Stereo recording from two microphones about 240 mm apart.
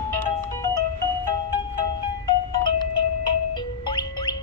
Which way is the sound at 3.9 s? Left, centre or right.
Centre.